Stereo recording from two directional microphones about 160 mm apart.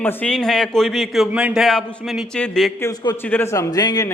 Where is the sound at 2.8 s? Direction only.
25° left (ahead or behind).